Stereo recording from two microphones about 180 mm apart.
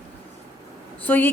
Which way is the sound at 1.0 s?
10° left (ahead or behind).